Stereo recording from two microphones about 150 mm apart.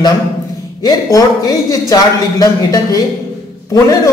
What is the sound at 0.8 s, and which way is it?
A man's voice, 25° left (ahead or behind).